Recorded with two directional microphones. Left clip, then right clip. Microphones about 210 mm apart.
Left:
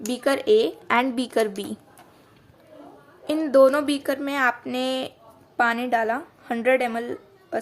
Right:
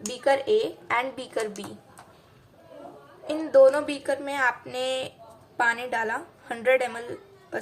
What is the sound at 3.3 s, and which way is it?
A woman's voice, 45° left (ahead or behind).